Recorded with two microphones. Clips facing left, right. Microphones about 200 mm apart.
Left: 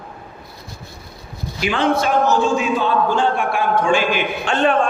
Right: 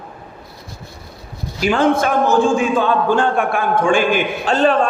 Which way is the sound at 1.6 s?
45° right (ahead or behind).